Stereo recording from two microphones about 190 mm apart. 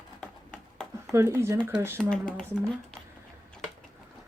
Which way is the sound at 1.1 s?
15° right (ahead or behind).